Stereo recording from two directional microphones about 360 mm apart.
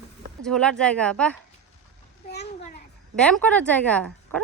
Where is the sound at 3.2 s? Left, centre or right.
Centre.